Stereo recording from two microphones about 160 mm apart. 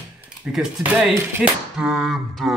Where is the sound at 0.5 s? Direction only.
5° right (ahead or behind).